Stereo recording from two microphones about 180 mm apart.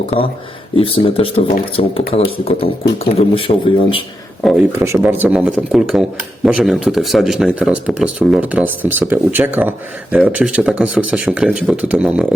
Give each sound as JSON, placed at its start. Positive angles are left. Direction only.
{"t": 0.8, "sound": "speech", "side_deg": 30}
{"t": 4.4, "sound": "speech", "side_deg": 0}
{"t": 4.8, "sound": "speech", "side_deg": -15}